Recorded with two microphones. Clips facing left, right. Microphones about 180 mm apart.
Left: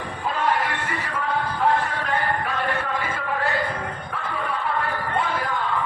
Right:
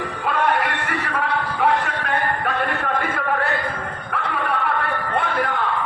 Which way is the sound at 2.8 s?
60° right (ahead or behind).